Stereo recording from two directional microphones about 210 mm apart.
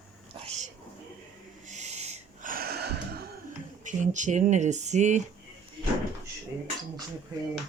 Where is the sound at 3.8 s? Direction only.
35° right (ahead or behind).